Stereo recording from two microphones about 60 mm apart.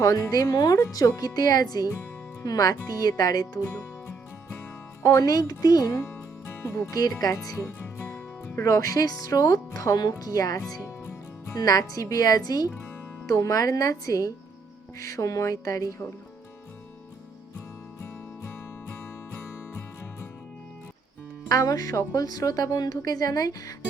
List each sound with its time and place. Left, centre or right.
0.5 s speech: left
5.0 s speech: left
6.0 s music: left
7.2 s speech: left
8.5 s speech: left
10.8 s music: left
11.6 s speech: left
13.2 s speech: left
21.5 s speech: left